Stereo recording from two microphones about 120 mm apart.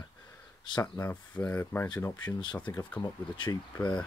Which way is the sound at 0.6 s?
35° left (ahead or behind).